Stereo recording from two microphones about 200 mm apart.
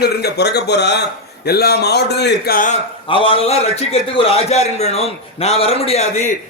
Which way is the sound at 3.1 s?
25° left (ahead or behind).